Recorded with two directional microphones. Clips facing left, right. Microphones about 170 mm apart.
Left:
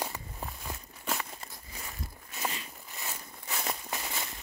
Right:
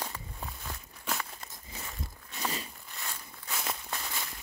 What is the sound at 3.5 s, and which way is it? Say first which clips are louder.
Walk: left 1 dB; centre (ahead or behind).